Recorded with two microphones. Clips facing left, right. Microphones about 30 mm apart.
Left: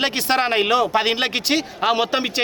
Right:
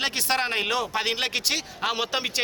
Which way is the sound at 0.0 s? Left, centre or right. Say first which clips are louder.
Left 6 dB; centre.